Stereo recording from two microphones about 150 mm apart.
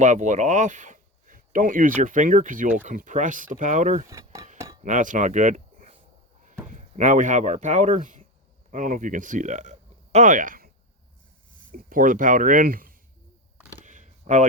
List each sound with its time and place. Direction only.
0.0 s speech: 55° right (ahead or behind)
4.1 s speech: 20° right (ahead or behind)
4.5 s cutlery: 20° right (ahead or behind)
4.8 s speech: 60° right (ahead or behind)
11.7 s speech: 65° right (ahead or behind)
13.8 s a sound: 55° right (ahead or behind)